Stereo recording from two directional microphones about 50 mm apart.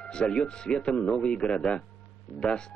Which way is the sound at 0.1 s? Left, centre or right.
Centre.